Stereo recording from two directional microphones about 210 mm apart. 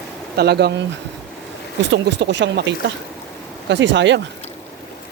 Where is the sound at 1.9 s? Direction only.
55° right (ahead or behind).